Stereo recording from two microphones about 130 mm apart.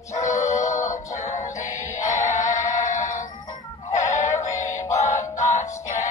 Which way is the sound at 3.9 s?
25° left (ahead or behind).